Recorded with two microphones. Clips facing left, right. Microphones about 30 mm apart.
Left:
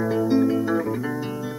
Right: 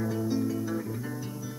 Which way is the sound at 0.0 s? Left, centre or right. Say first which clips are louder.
Left 9 dB; left.